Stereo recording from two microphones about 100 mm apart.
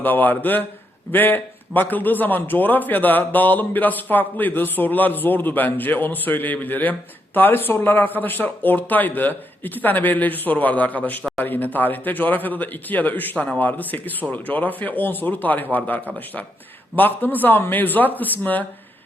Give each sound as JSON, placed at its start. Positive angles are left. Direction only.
{"t": 0.0, "sound": "a man's voice", "side_deg": 20}